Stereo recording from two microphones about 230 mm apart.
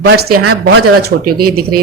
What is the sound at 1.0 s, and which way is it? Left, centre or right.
Speech, right.